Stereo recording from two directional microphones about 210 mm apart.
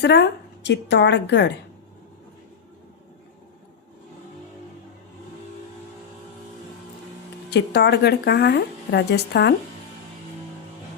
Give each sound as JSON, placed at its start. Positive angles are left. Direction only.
{"t": 0.0, "sound": "a woman's voice", "side_deg": 55}
{"t": 7.5, "sound": "a woman's voice", "side_deg": 50}